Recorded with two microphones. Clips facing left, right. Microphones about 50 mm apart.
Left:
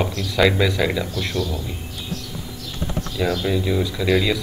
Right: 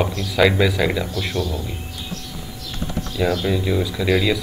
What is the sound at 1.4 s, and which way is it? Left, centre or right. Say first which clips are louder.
Speech: right 1 dB; right.